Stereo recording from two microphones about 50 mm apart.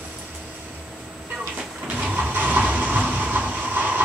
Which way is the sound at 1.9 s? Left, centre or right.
Right.